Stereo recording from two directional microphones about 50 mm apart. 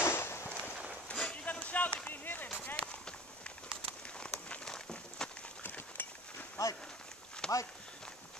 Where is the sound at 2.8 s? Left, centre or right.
Left.